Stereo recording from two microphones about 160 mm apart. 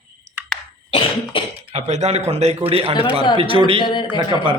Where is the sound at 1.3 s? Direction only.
35° left (ahead or behind).